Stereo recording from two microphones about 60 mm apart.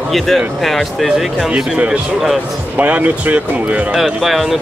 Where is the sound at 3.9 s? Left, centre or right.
Centre.